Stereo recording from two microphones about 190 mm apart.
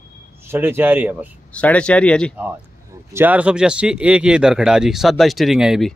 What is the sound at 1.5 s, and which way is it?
Speech, 5° left (ahead or behind).